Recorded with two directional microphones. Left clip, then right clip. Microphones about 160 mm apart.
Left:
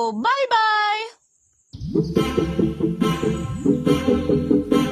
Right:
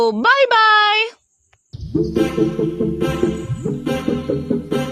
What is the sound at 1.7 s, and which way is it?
Music, centre (ahead or behind).